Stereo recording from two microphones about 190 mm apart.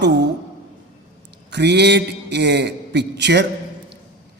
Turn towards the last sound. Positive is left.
turn(degrees=-65)  # may be behind; listen again after turning